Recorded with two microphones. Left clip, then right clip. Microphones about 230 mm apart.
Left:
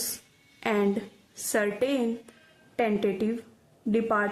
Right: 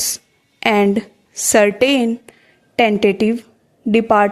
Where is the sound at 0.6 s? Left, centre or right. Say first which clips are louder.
Right 12 dB; right.